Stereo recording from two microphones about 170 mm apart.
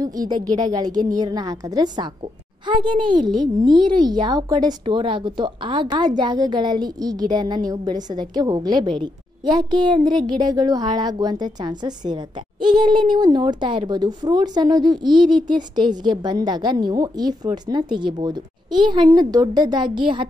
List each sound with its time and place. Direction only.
0.0 s speech: 20° right (ahead or behind)